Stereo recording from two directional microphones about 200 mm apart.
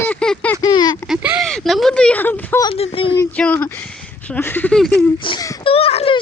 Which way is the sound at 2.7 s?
30° left (ahead or behind).